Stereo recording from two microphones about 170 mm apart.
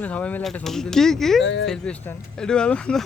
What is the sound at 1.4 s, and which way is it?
Speech, 90° left.